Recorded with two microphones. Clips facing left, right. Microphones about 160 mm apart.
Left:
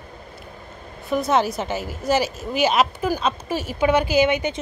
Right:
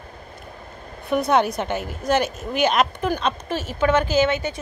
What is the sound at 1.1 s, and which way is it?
A woman's voice, centre (ahead or behind).